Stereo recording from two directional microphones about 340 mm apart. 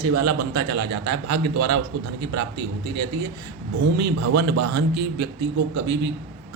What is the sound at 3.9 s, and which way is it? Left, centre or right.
A man's voice, right.